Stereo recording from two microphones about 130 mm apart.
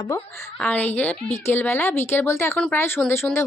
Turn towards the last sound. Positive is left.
turn(degrees=20)  # may be behind; listen again after turning